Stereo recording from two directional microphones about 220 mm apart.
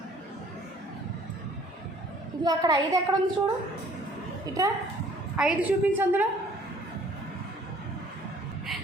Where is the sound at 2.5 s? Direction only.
20° right (ahead or behind).